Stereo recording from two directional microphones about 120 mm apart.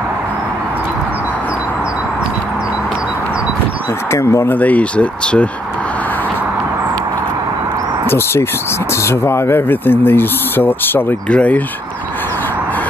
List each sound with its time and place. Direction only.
4.1 s speech: 20° left (ahead or behind)
9.0 s speech: 20° left (ahead or behind)